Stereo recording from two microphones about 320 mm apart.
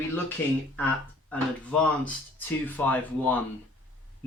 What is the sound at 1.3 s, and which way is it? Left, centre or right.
Speech, centre.